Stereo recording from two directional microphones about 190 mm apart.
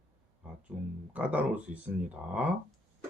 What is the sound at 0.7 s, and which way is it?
Speech, 10° right (ahead or behind).